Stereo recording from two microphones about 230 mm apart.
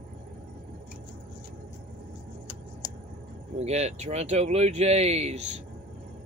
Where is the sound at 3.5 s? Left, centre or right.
Right.